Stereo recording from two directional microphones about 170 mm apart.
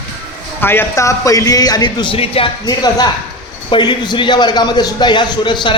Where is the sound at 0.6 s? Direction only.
15° left (ahead or behind).